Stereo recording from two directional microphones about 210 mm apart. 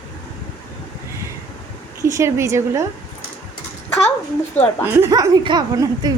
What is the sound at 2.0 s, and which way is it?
Speech, 15° right (ahead or behind).